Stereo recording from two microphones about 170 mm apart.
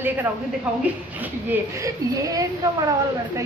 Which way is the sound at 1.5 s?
20° right (ahead or behind).